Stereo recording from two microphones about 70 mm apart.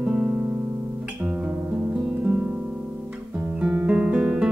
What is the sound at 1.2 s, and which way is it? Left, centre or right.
Music, right.